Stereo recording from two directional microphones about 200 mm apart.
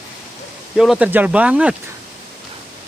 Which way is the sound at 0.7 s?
Centre (ahead or behind).